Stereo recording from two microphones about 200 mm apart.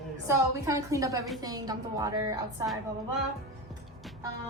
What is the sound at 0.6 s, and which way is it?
A woman's voice, 15° right (ahead or behind).